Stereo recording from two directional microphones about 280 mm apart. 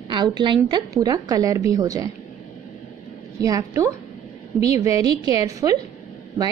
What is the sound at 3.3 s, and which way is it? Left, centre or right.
A woman's voice, centre.